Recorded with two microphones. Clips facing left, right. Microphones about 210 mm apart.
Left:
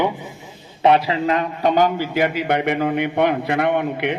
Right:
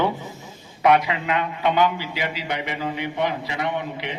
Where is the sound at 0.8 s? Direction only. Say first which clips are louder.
Left 3 dB; 30° left (ahead or behind).